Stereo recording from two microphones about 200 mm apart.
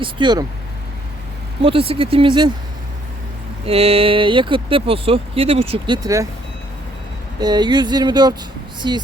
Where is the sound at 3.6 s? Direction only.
30° right (ahead or behind).